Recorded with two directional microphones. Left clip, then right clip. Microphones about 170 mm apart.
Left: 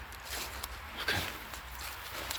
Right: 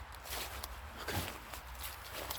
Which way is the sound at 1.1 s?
15° right (ahead or behind).